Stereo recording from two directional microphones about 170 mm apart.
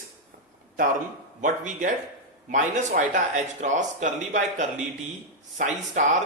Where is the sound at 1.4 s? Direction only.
50° right (ahead or behind).